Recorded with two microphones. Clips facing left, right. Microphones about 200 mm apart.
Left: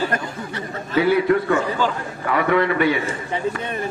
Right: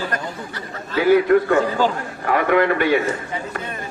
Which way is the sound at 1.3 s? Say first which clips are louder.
Right 3 dB; 50° right (ahead or behind).